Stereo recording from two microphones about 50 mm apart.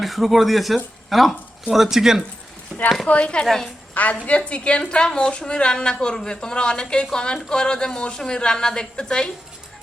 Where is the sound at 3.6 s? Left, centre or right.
Left.